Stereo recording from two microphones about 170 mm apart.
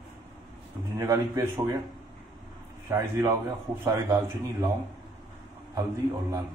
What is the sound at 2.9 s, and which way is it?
A man's voice, 15° right (ahead or behind).